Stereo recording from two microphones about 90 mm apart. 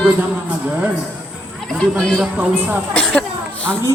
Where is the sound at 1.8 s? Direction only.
10° left (ahead or behind).